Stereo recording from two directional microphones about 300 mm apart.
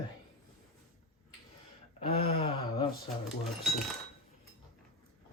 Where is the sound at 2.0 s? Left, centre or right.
Left.